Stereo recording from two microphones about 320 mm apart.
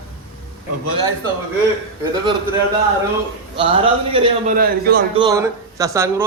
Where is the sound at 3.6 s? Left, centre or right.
Centre.